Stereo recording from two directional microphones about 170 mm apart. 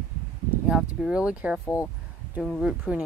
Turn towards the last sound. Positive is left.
turn(degrees=-5)  # may be behind; listen again after turning